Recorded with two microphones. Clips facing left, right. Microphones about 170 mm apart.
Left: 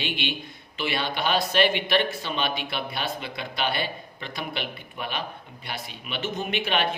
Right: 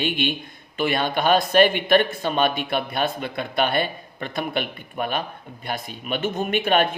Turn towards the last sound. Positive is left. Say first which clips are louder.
# right 6 dB
turn(degrees=-50)  # may be behind; listen again after turning